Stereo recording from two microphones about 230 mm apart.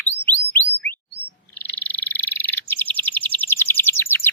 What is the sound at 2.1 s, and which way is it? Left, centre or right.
Bird, centre.